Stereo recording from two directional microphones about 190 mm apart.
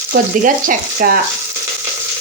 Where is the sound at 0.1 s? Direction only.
45° right (ahead or behind).